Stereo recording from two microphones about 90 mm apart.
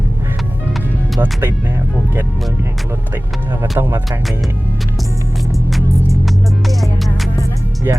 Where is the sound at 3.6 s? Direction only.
25° right (ahead or behind).